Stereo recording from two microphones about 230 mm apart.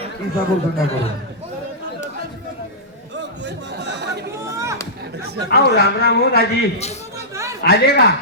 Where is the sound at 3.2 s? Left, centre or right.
Right.